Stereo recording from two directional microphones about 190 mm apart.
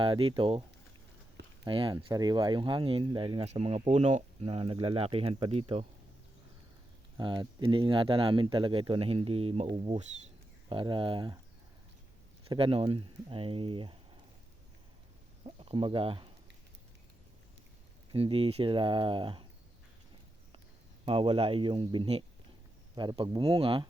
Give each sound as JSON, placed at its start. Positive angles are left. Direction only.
{"t": 0.0, "sound": "speech", "side_deg": -25}
{"t": 1.6, "sound": "speech", "side_deg": -25}
{"t": 7.2, "sound": "speech", "side_deg": -25}
{"t": 12.5, "sound": "speech", "side_deg": -30}
{"t": 15.4, "sound": "speech", "side_deg": -25}
{"t": 18.1, "sound": "speech", "side_deg": -30}
{"t": 21.0, "sound": "speech", "side_deg": -30}